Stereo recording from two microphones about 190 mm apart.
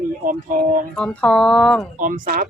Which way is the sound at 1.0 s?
5° left (ahead or behind).